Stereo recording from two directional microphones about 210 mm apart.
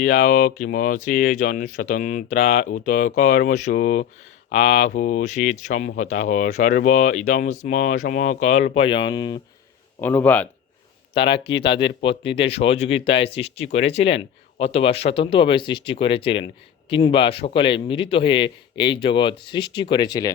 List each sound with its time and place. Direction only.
0.0 s speech: 40° left (ahead or behind); by 9.4 s 20° left (ahead or behind)
10.0 s speech: 10° left (ahead or behind)
11.2 s a man's voice: 25° left (ahead or behind)